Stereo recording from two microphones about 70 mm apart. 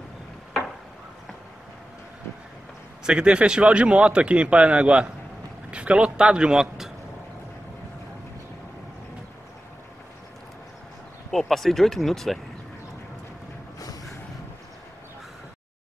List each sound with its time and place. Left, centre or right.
3.1 s a man's voice: centre
11.2 s speech: centre